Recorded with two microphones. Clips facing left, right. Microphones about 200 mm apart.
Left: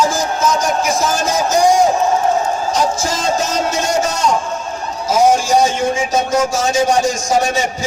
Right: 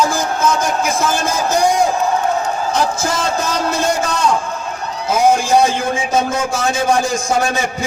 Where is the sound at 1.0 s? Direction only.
55° right (ahead or behind).